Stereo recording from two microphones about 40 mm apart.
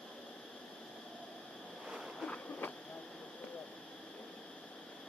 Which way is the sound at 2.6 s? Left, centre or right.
Left.